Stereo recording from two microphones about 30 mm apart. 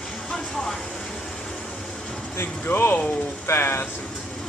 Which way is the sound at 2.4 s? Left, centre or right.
Left.